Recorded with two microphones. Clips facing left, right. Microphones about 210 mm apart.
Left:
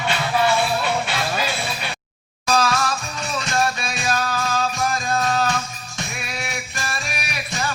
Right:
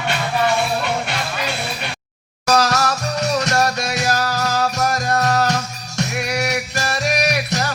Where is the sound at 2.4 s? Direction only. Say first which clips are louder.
Right 3 dB; 75° right (ahead or behind).